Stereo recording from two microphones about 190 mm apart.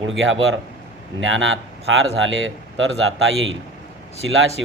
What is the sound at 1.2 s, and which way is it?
A man's voice, 90° right.